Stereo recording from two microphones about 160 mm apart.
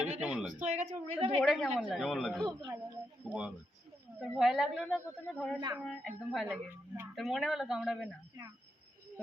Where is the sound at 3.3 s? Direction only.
5° right (ahead or behind).